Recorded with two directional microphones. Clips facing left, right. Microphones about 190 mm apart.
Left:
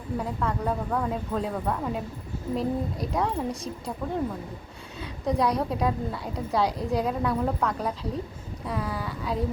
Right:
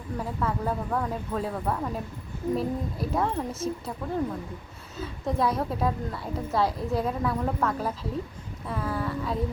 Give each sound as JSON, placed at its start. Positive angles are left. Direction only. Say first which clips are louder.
{"t": 0.2, "sound": "a woman's voice", "louder": "right 1 dB", "side_deg": 0}